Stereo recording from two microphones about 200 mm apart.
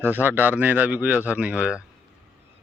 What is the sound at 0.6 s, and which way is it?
Speech, 10° right (ahead or behind).